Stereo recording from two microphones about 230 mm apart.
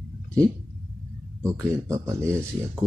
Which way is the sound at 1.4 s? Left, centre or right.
Centre.